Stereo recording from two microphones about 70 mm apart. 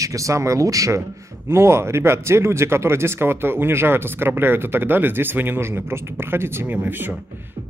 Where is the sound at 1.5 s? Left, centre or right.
Right.